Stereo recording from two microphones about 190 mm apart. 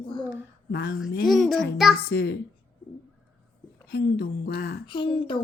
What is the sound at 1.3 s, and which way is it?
Speech, centre (ahead or behind).